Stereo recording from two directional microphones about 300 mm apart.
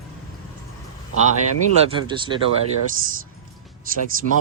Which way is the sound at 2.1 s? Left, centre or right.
Centre.